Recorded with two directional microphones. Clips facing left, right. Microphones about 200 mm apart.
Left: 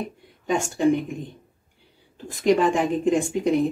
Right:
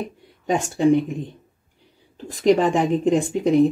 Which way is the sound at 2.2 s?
40° right (ahead or behind).